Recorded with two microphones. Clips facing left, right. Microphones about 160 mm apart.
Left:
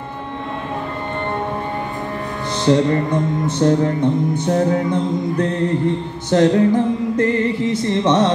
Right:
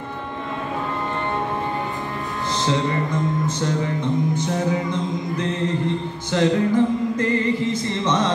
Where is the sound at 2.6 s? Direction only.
60° left (ahead or behind).